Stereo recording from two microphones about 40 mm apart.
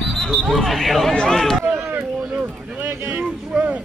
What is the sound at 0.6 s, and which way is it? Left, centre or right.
Speech, centre.